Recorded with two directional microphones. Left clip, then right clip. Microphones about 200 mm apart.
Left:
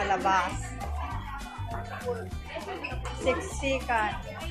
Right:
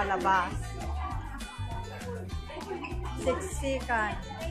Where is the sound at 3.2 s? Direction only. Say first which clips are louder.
Left 2 dB; 5° right (ahead or behind).